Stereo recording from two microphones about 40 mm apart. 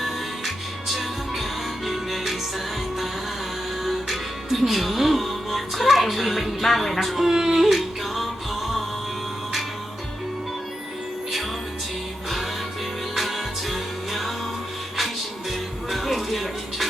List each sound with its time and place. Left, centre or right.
0.0 s music: centre
3.8 s music: centre
7.3 s a sound: centre
7.6 s music: centre
13.1 s music: centre
15.9 s music: centre